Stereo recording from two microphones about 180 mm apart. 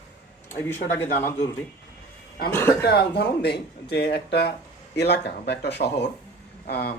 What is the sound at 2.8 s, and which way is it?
Speech, 65° left (ahead or behind).